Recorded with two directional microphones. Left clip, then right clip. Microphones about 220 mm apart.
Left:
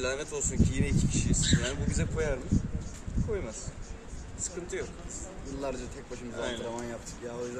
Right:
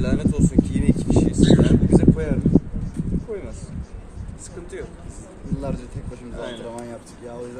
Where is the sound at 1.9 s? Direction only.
5° left (ahead or behind).